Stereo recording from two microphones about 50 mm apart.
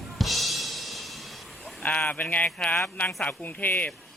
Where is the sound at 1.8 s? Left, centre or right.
Left.